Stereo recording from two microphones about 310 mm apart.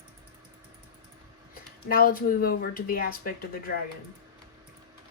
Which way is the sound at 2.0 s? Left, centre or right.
Left.